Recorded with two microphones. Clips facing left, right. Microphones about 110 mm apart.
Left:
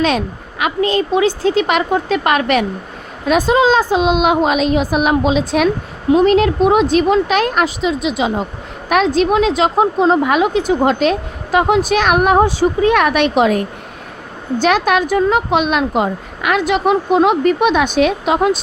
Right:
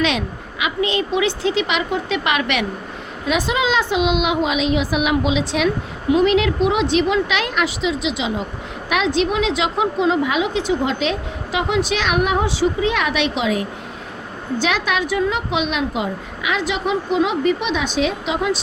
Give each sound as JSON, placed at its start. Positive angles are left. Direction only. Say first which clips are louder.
{"t": 0.0, "sound": "a woman's voice", "louder": "left 4 dB", "side_deg": 40}